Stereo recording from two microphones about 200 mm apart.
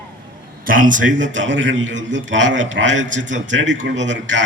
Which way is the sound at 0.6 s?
45° right (ahead or behind).